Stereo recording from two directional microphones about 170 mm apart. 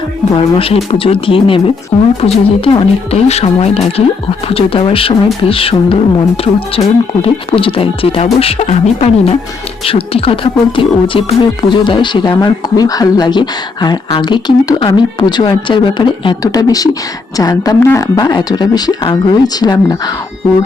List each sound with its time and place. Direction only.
0.3 s speech: 35° left (ahead or behind)